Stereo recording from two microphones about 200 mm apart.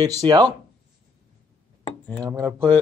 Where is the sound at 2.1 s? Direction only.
15° right (ahead or behind).